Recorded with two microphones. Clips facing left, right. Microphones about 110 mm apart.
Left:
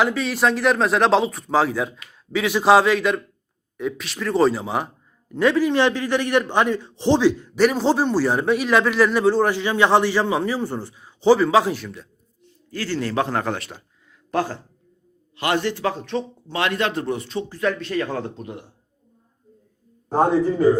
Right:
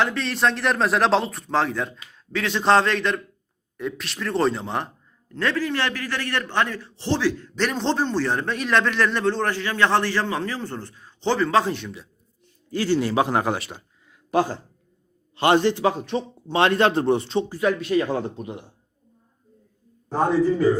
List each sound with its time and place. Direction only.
0.0 s a man's voice: 5° left (ahead or behind)
5.3 s a man's voice: 15° left (ahead or behind)
12.7 s speech: 20° right (ahead or behind)
13.6 s a man's voice: centre (ahead or behind)
14.3 s a man's voice: 20° right (ahead or behind)
16.5 s a man's voice: 30° right (ahead or behind)
17.5 s speech: 10° right (ahead or behind)